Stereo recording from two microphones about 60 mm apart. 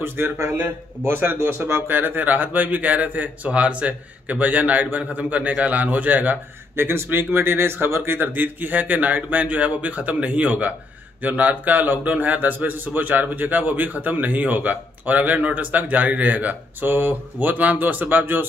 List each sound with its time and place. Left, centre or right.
0.0 s a man's voice: right
6.8 s a man's voice: right